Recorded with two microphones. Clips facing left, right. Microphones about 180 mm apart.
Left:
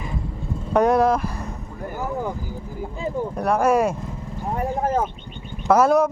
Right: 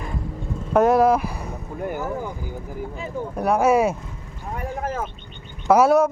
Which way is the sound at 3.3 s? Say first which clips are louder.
Right 1 dB; 5° right (ahead or behind).